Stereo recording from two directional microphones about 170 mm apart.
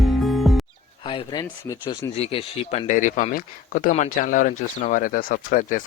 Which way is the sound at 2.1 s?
35° left (ahead or behind).